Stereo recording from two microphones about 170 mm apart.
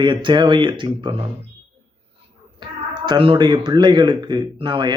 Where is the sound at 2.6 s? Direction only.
25° right (ahead or behind).